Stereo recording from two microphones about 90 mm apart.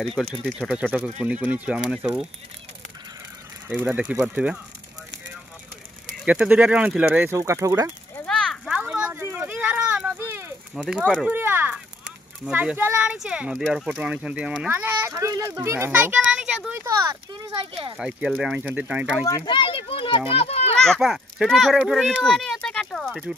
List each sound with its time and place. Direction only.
0.2 s speech: 5° right (ahead or behind)
3.6 s speech: 15° right (ahead or behind)
6.2 s speech: 15° right (ahead or behind)
7.1 s speech: 30° right (ahead or behind)
8.6 s a sound: 10° right (ahead or behind)
10.8 s speech: 15° right (ahead or behind)
15.0 s speech: 35° right (ahead or behind)
15.9 s a child's voice: 15° right (ahead or behind)
16.8 s speech: 35° right (ahead or behind)
17.3 s speech: 70° right (ahead or behind)
17.9 s speech: 10° right (ahead or behind)
19.4 s children playing: 65° left (ahead or behind); by 20.7 s 90° left
20.8 s a child's voice: centre (ahead or behind)